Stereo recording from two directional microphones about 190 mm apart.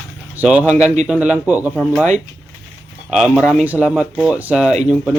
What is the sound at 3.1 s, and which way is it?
Speech, centre (ahead or behind).